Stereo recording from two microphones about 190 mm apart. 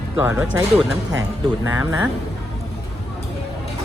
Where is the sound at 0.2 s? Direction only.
10° right (ahead or behind).